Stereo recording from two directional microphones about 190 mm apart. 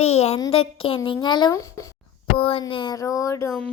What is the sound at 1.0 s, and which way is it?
Speech, 20° left (ahead or behind).